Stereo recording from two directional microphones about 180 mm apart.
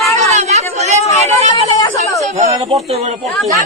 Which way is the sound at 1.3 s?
40° right (ahead or behind).